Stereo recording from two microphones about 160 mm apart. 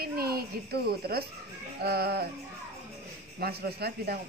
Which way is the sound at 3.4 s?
75° right (ahead or behind).